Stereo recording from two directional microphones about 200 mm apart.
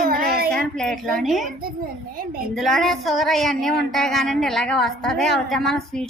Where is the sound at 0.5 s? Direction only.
5° left (ahead or behind).